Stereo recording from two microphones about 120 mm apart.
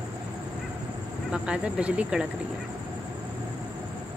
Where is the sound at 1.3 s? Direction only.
10° right (ahead or behind).